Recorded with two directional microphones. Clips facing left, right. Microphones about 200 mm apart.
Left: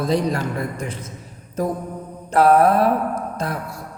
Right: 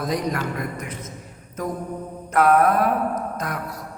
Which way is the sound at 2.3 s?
30° left (ahead or behind).